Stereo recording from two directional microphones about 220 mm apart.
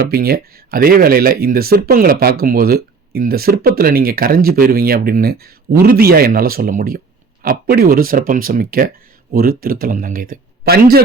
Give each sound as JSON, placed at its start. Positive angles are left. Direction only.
{"t": 0.0, "sound": "a man's voice", "side_deg": -45}